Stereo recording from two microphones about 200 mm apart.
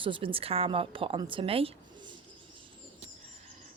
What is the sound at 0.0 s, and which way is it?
A woman's voice, 25° right (ahead or behind).